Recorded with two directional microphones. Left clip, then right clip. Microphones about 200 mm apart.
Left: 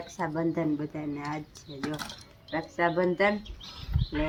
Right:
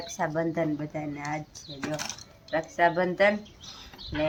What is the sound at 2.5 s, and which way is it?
Speech, 10° right (ahead or behind).